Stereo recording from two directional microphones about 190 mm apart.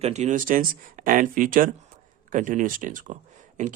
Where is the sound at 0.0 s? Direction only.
35° right (ahead or behind).